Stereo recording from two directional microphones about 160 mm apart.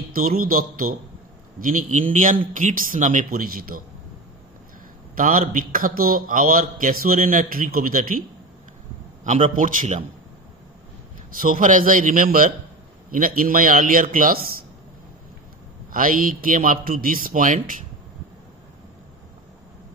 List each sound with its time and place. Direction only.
0.1 s a man's voice: 65° right (ahead or behind)
5.1 s a man's voice: 60° right (ahead or behind)
9.2 s a man's voice: 50° right (ahead or behind)
11.4 s a man's voice: 60° right (ahead or behind)
15.9 s a man's voice: 60° right (ahead or behind)